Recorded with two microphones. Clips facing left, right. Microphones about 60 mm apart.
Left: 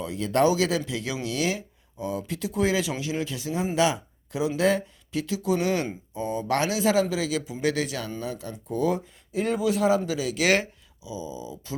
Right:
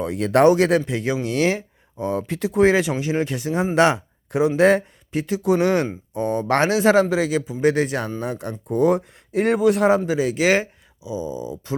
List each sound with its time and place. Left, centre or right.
0.0 s speech: right
0.9 s speech: right
10.1 s speech: right
10.4 s speech: centre
11.0 s speech: right